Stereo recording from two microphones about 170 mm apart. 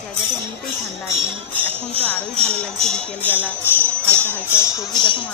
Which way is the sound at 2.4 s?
5° left (ahead or behind).